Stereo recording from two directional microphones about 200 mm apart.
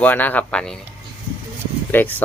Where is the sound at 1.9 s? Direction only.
10° left (ahead or behind).